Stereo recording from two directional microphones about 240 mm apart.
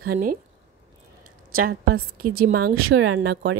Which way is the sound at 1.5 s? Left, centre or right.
Right.